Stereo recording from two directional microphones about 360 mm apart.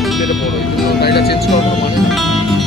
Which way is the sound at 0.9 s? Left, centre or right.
Left.